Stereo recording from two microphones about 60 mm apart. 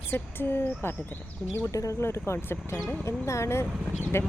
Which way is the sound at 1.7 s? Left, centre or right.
Left.